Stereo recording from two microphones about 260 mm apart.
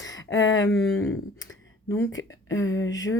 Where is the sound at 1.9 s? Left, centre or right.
Centre.